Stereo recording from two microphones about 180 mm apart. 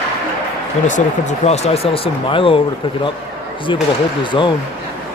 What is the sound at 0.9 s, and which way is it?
Speech, 45° left (ahead or behind).